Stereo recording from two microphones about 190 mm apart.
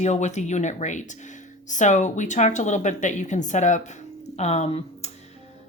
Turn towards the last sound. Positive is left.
turn(degrees=35)  # may be behind; listen again after turning